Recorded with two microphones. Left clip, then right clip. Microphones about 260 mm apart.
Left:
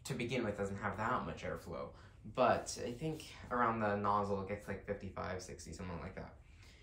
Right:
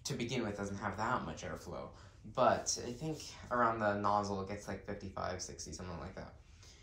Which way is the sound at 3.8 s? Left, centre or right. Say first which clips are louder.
Right 2 dB; centre.